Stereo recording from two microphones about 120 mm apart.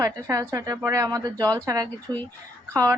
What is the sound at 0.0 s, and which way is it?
Speech, 25° right (ahead or behind).